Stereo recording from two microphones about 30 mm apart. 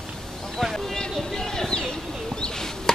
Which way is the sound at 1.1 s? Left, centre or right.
Centre.